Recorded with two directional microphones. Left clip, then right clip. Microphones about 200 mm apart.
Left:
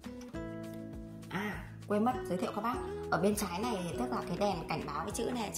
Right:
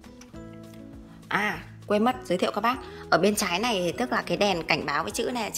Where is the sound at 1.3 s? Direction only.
Centre (ahead or behind).